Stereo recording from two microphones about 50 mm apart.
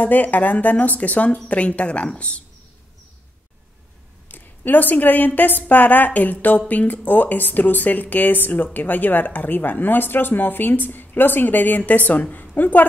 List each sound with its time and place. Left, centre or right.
0.0 s speech: left
4.3 s speech: left